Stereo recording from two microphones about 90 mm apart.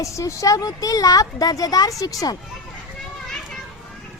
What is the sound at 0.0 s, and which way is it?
Speech, 35° left (ahead or behind).